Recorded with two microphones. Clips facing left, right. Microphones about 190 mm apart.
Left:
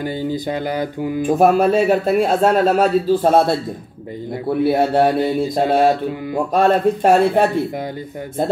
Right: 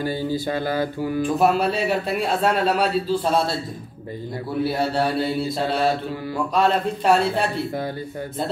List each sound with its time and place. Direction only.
0.0 s speech: 20° left (ahead or behind)
1.2 s a man's voice: 50° left (ahead or behind)